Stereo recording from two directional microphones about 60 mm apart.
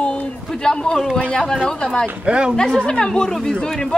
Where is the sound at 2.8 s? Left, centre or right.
Centre.